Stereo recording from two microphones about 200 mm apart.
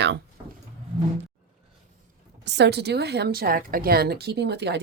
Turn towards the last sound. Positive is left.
turn(degrees=-55)  # may be behind; listen again after turning